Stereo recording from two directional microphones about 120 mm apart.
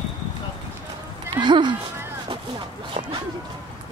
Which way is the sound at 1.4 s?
40° right (ahead or behind).